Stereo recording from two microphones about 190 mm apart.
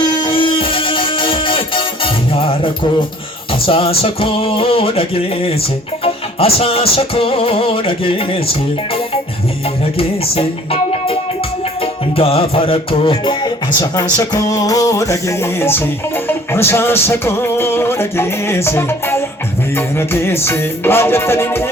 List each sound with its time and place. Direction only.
0.0 s music: 20° left (ahead or behind)
10.0 s music: 30° left (ahead or behind); by 21.7 s 10° left (ahead or behind)